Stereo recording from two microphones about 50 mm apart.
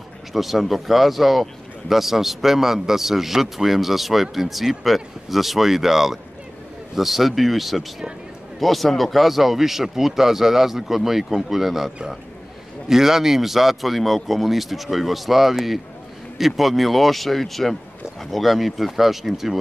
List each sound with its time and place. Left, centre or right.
0.3 s speech: centre